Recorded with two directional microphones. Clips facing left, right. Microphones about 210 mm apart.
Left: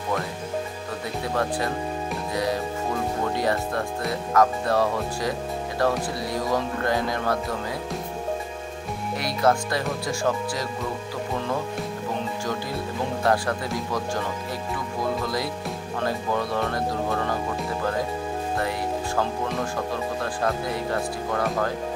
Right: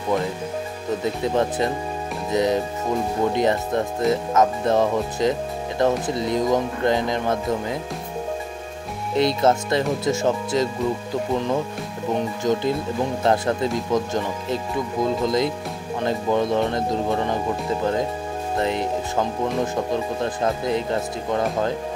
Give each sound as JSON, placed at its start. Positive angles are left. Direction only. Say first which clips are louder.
{"t": 1.0, "sound": "speech", "louder": "right 4 dB", "side_deg": -20}
{"t": 9.1, "sound": "speech", "louder": "right 4 dB", "side_deg": -25}
{"t": 12.5, "sound": "speech", "louder": "right 7 dB", "side_deg": -20}
{"t": 18.6, "sound": "speech", "louder": "right 8 dB", "side_deg": -20}